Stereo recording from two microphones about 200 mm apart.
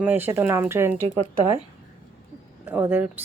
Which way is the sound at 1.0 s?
35° right (ahead or behind).